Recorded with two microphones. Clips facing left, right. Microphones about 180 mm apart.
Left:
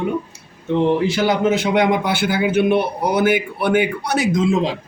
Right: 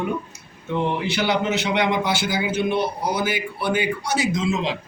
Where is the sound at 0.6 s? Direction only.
40° left (ahead or behind).